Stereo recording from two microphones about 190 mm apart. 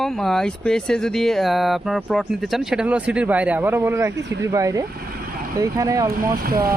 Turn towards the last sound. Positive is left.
turn(degrees=-50)  # may be behind; listen again after turning